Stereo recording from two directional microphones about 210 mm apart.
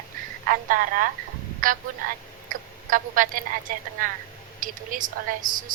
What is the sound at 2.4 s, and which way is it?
Speech, 40° right (ahead or behind).